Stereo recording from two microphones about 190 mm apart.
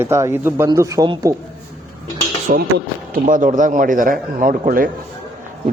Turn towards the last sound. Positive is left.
turn(degrees=-50)  # may be behind; listen again after turning